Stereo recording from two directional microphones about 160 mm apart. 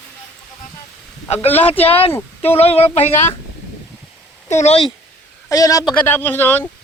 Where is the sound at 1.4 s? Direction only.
35° left (ahead or behind).